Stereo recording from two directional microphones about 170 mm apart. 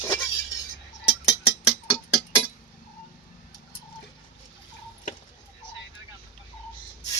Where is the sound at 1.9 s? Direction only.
20° left (ahead or behind).